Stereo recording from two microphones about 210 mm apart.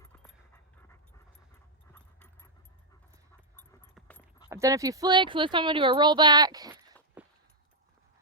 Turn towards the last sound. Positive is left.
turn(degrees=-20)  # may be behind; listen again after turning